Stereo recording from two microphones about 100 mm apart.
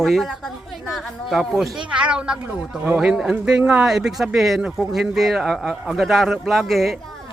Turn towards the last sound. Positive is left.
turn(degrees=0)  # may be behind; listen again after turning